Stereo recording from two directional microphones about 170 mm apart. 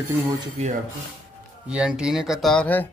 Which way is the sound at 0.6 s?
40° right (ahead or behind).